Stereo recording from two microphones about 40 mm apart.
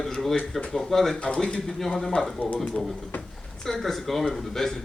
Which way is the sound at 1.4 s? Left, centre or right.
Centre.